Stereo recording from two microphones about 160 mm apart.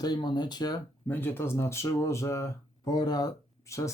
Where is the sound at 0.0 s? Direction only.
25° left (ahead or behind).